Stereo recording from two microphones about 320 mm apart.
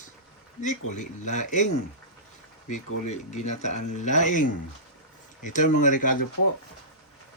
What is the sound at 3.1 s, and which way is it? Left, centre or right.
Speech, left.